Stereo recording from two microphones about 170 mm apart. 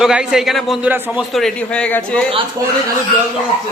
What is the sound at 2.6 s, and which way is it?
Speech, 20° right (ahead or behind).